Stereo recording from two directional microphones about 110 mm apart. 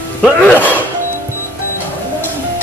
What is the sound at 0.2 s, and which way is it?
Speech, 15° left (ahead or behind).